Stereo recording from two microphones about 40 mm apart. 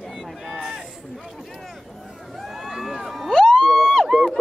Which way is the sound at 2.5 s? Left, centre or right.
Centre.